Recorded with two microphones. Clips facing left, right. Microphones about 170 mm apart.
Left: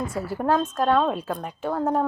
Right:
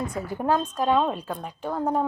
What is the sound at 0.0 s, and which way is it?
Speech, 5° left (ahead or behind).